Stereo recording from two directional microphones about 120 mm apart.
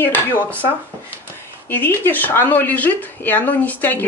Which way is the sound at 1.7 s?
15° left (ahead or behind).